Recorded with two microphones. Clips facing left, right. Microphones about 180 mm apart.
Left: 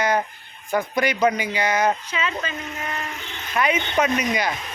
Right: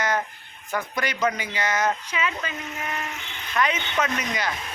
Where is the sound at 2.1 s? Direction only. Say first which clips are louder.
Left 1 dB; 10° right (ahead or behind).